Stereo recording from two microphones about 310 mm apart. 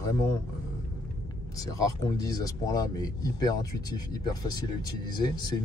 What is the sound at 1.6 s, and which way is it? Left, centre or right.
Speech, centre.